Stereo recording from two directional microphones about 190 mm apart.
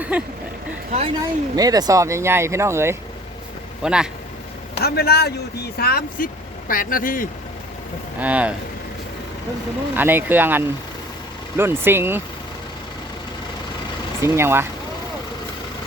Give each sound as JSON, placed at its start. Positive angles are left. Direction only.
{"t": 0.1, "sound": "speech", "side_deg": -5}
{"t": 0.9, "sound": "a woman's voice", "side_deg": -35}
{"t": 1.5, "sound": "a man's voice", "side_deg": -20}
{"t": 4.8, "sound": "speech", "side_deg": 55}
{"t": 8.2, "sound": "speech", "side_deg": -10}
{"t": 9.9, "sound": "speech", "side_deg": -10}
{"t": 14.2, "sound": "speech", "side_deg": -15}